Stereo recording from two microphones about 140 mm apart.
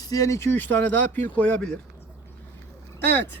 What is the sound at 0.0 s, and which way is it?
Speech, 25° left (ahead or behind).